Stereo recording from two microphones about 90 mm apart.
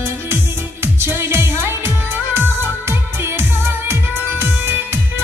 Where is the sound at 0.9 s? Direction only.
25° right (ahead or behind).